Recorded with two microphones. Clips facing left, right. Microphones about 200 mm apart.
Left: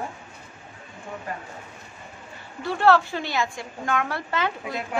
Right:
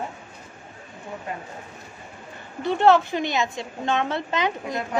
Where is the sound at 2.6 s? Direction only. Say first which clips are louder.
Right 2 dB; 20° right (ahead or behind).